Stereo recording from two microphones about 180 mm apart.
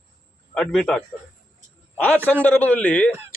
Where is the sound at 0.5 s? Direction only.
5° left (ahead or behind).